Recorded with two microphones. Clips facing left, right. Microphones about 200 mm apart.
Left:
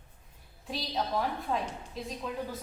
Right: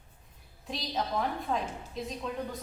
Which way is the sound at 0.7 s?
Centre (ahead or behind).